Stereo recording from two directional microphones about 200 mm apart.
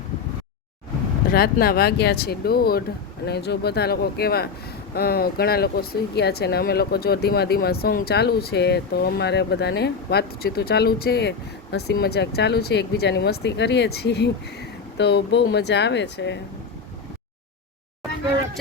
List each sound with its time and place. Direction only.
1.3 s speech: 50° left (ahead or behind)